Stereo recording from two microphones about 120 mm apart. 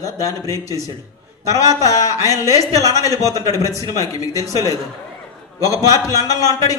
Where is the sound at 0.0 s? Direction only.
30° left (ahead or behind).